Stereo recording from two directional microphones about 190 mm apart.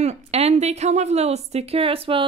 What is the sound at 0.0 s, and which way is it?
A woman's voice, 35° right (ahead or behind).